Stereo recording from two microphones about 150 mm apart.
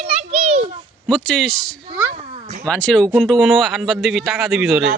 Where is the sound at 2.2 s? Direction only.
45° right (ahead or behind).